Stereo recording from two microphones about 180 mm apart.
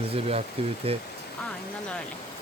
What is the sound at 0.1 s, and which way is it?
Speech, 35° right (ahead or behind).